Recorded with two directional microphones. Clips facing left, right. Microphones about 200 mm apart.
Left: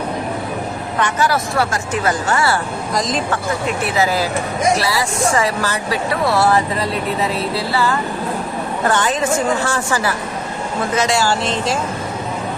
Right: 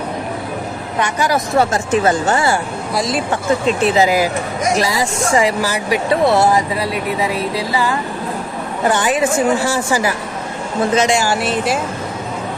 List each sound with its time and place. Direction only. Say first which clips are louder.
0.9 s speech: right 1 dB; 15° right (ahead or behind)
2.9 s speech: right 1 dB; 5° right (ahead or behind)
3.8 s speech: right 4 dB; 20° right (ahead or behind)